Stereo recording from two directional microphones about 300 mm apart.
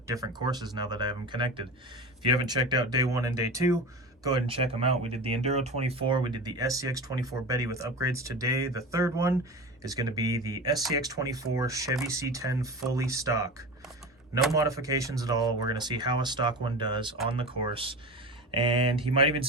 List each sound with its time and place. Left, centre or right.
0.1 s speech: centre
14.5 s speech: centre